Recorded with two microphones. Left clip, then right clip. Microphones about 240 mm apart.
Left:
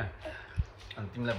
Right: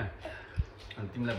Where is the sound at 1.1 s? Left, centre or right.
Centre.